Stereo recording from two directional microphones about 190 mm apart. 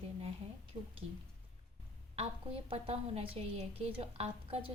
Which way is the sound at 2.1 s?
30° right (ahead or behind).